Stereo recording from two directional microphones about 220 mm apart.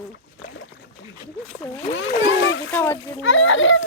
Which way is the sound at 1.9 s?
60° left (ahead or behind).